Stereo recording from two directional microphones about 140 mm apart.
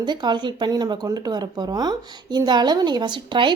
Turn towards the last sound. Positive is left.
turn(degrees=-35)  # may be behind; listen again after turning